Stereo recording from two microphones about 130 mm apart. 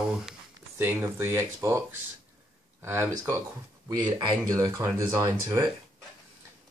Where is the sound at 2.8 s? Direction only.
20° right (ahead or behind).